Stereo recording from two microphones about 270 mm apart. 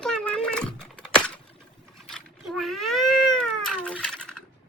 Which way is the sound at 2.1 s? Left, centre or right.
Centre.